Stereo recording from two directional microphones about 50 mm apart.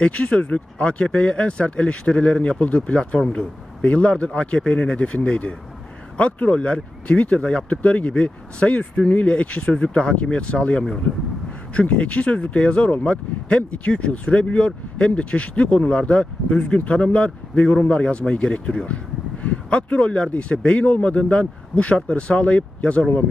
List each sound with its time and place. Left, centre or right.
0.0 s speech: left